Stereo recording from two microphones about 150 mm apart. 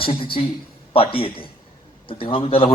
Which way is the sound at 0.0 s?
35° left (ahead or behind).